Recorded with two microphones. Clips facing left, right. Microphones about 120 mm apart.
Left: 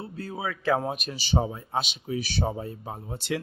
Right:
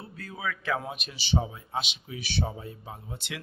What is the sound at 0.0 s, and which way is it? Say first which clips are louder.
Speech: left 3 dB; 30° left (ahead or behind).